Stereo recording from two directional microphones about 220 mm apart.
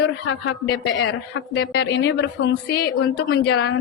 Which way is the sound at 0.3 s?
55° left (ahead or behind).